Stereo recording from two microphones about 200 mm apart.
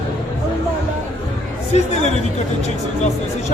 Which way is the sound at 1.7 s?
35° left (ahead or behind).